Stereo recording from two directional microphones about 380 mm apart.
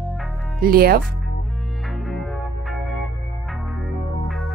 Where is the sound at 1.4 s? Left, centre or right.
Centre.